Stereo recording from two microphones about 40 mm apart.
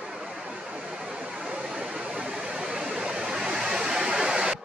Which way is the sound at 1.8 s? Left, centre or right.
Right.